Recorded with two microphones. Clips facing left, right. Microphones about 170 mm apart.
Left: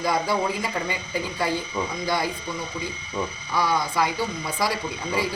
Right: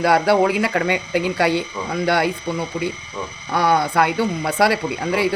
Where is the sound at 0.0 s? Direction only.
70° right (ahead or behind).